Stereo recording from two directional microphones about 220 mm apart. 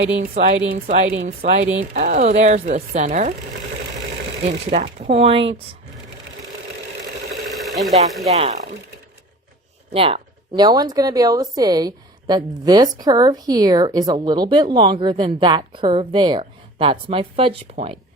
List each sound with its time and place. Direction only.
0.3 s speech: 35° right (ahead or behind)
1.1 s speech: 55° right (ahead or behind)
1.7 s speech: 30° right (ahead or behind)
4.7 s speech: 30° right (ahead or behind)
7.5 s speech: centre (ahead or behind)
9.9 s speech: 25° right (ahead or behind)